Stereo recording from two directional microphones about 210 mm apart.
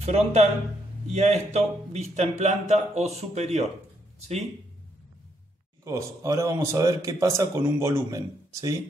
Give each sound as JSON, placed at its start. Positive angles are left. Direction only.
{"t": 0.0, "sound": "a man's voice", "side_deg": -30}
{"t": 5.9, "sound": "speech", "side_deg": -15}